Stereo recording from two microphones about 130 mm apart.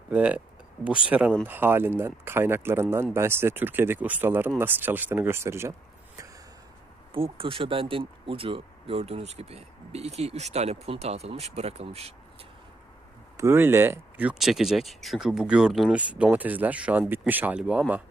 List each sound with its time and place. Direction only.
0.1 s speech: 10° right (ahead or behind)
7.1 s speech: 45° right (ahead or behind)
13.3 s speech: 20° right (ahead or behind)